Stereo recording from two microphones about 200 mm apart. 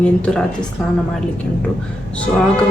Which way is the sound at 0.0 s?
5° left (ahead or behind).